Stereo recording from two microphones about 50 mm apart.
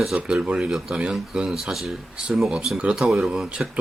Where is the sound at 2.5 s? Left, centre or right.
Centre.